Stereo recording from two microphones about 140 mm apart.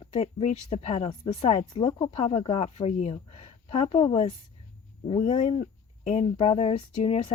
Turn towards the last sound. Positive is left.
turn(degrees=45)  # may be behind; listen again after turning